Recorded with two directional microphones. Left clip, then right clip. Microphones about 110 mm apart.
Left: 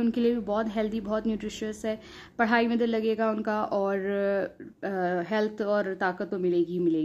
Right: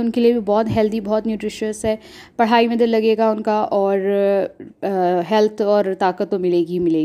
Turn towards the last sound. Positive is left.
turn(degrees=-50)  # may be behind; listen again after turning